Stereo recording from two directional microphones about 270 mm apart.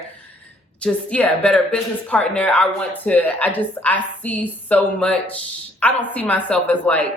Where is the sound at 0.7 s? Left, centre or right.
Centre.